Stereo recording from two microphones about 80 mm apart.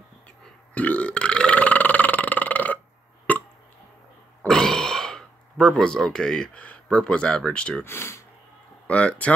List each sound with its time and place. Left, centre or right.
0.7 s burping: centre
3.3 s hiccup: left
4.5 s throat clearing: centre
7.8 s speech: left
8.8 s speech: centre